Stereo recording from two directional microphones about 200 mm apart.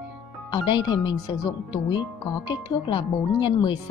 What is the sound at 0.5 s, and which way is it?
A woman's voice, 20° left (ahead or behind).